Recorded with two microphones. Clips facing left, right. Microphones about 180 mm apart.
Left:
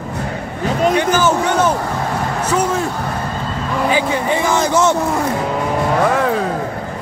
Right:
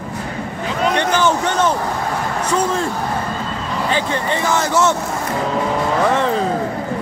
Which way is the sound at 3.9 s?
10° left (ahead or behind).